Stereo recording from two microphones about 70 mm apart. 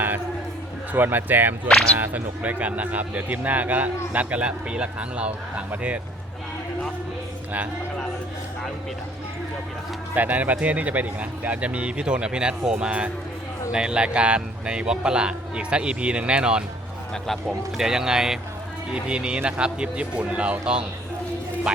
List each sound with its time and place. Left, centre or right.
0.9 s speech: right
10.2 s speech: right
17.7 s speech: centre